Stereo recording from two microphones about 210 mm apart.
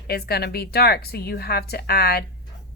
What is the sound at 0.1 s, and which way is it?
A woman's voice, 50° left (ahead or behind).